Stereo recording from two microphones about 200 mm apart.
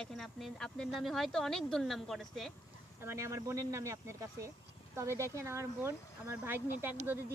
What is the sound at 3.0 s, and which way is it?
Speech, 15° right (ahead or behind).